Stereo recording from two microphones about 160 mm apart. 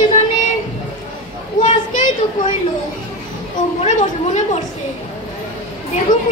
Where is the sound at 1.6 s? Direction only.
55° left (ahead or behind).